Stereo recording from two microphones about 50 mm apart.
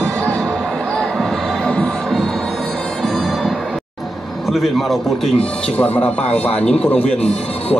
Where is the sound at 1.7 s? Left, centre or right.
Centre.